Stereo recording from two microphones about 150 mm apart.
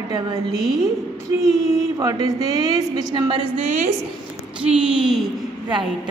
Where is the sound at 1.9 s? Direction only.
25° right (ahead or behind).